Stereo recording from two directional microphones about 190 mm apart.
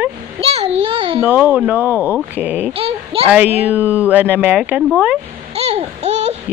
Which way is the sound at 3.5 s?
10° right (ahead or behind).